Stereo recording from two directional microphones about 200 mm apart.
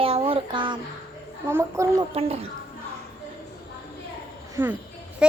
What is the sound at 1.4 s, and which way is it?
Speech, 15° right (ahead or behind).